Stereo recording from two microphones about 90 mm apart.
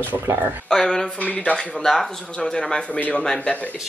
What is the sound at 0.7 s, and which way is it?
Speech, 5° left (ahead or behind).